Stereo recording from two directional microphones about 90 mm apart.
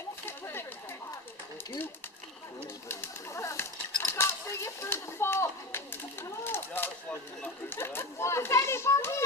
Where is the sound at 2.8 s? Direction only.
30° left (ahead or behind).